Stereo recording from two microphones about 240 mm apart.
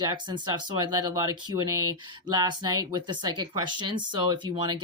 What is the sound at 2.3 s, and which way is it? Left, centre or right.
Speech, centre.